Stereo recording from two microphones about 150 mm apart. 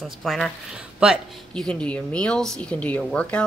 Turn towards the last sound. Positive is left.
turn(degrees=10)  # may be behind; listen again after turning